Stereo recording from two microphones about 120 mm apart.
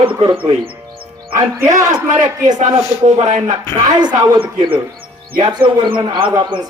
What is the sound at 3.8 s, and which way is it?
Speech, 40° right (ahead or behind).